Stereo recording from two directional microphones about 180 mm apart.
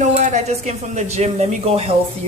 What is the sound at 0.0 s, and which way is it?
Speech, 40° right (ahead or behind).